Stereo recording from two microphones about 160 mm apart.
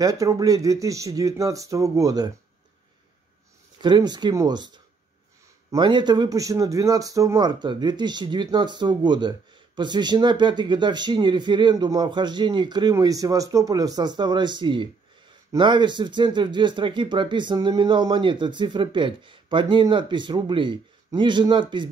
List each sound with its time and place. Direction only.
0.0 s speech: 20° right (ahead or behind)
3.8 s speech: 25° right (ahead or behind)